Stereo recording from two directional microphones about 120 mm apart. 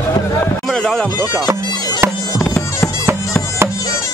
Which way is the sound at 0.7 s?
5° left (ahead or behind).